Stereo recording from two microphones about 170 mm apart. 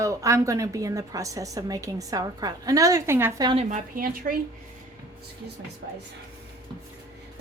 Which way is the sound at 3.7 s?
55° right (ahead or behind).